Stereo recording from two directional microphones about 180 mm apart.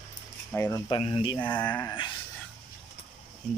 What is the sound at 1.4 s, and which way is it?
Speech, 10° left (ahead or behind).